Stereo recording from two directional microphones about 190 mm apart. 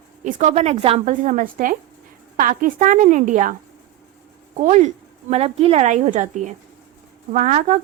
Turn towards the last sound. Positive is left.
turn(degrees=-40)  # may be behind; listen again after turning